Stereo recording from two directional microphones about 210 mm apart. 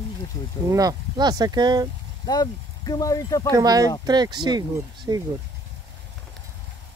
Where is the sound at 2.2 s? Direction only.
20° left (ahead or behind).